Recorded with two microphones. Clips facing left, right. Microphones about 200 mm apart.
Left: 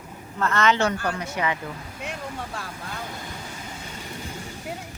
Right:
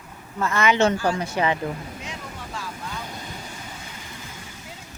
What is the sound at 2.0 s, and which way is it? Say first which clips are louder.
Vehicle: left 3 dB; 60° left (ahead or behind).